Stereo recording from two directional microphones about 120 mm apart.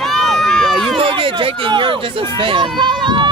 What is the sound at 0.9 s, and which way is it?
Speech, 50° right (ahead or behind).